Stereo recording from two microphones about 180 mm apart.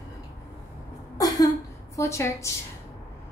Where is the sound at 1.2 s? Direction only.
20° left (ahead or behind).